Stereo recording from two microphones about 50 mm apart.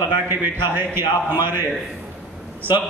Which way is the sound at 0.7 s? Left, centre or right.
Right.